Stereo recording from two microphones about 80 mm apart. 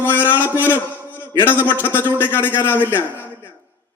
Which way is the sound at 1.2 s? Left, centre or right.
Left.